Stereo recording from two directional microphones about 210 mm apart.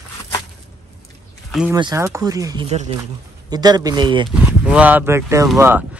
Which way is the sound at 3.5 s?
20° right (ahead or behind).